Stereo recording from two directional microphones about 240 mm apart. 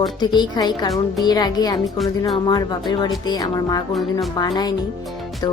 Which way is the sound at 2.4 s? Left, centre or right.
Centre.